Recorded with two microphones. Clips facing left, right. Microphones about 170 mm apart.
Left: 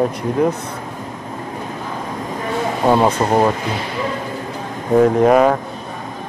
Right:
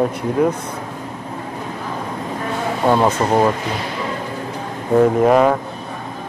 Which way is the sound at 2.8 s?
10° left (ahead or behind).